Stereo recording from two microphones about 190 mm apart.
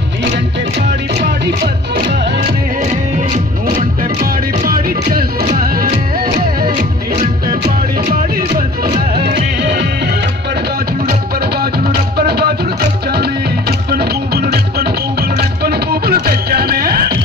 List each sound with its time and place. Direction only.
4.2 s music: 50° right (ahead or behind)
8.1 s music: 50° right (ahead or behind)
11.1 s music: 55° right (ahead or behind)